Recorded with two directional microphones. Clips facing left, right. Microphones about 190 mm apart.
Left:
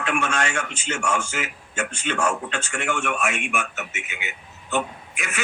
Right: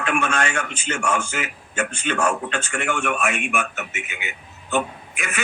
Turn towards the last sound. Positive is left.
turn(degrees=-55)  # may be behind; listen again after turning